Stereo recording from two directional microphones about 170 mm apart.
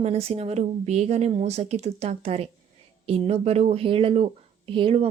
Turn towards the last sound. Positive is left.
turn(degrees=-35)  # may be behind; listen again after turning